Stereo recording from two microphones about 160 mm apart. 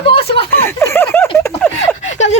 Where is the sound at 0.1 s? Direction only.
35° left (ahead or behind).